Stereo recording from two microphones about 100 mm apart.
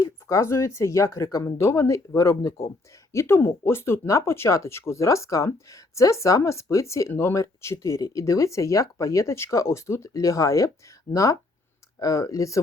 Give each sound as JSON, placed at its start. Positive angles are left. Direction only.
{"t": 0.0, "sound": "speech", "side_deg": 35}